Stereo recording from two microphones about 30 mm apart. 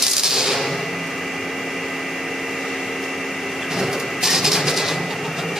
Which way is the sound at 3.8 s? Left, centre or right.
Centre.